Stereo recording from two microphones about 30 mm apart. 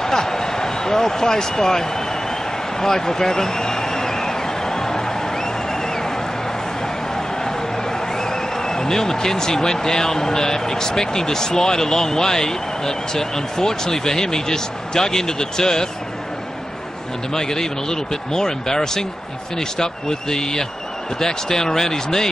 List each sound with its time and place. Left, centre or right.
0.0 s a sound: centre
7.2 s a man's voice: centre
17.3 s speech: centre